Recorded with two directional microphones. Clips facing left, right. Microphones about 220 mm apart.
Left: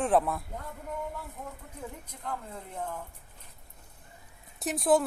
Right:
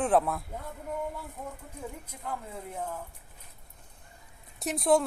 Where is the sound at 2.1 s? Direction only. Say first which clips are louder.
Even; 5° right (ahead or behind).